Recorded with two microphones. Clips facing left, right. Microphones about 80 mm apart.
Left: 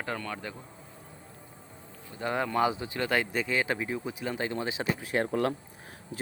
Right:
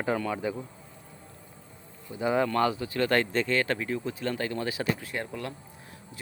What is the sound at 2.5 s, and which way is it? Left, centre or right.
Speech, centre.